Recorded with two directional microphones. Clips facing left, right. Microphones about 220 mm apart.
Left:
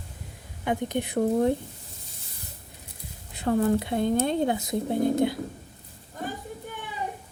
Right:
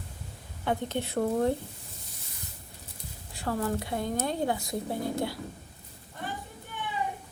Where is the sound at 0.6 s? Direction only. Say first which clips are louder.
Left 3 dB; 15° left (ahead or behind).